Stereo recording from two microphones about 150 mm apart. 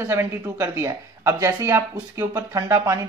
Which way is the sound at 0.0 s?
15° right (ahead or behind).